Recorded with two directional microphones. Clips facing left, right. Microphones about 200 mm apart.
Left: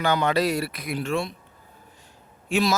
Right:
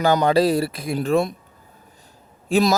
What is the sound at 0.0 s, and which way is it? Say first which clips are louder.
Speech: right 5 dB; 35° right (ahead or behind).